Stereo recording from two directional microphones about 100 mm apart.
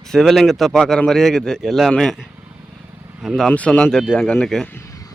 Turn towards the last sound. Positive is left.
turn(degrees=5)  # may be behind; listen again after turning